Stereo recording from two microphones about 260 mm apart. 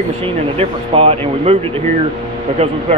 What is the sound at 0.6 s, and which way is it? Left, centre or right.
Speech, right.